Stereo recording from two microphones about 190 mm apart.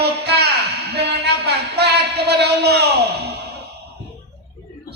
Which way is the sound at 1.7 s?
60° right (ahead or behind).